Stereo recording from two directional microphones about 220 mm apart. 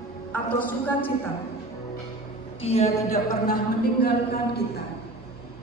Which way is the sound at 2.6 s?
25° left (ahead or behind).